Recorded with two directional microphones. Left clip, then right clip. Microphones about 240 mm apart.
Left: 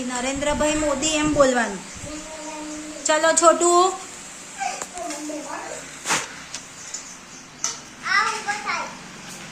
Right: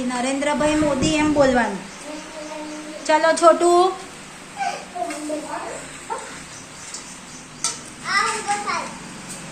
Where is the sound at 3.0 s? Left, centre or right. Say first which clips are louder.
Right 2 dB; left.